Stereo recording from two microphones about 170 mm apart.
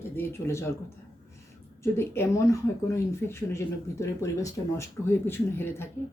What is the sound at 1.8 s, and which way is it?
Speech, 15° left (ahead or behind).